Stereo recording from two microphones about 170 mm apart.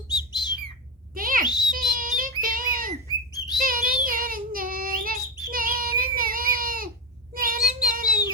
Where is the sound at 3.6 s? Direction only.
55° right (ahead or behind).